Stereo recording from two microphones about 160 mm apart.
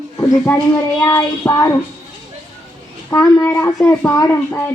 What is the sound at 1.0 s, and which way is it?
Child singing, 20° left (ahead or behind).